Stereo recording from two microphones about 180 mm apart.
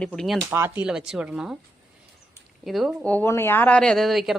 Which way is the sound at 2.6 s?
Centre (ahead or behind).